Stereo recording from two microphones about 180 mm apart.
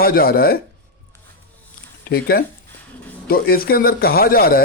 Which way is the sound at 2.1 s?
60° left (ahead or behind).